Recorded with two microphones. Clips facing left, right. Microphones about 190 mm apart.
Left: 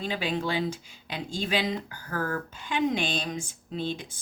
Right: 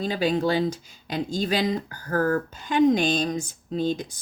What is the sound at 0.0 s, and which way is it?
Speech, 40° right (ahead or behind).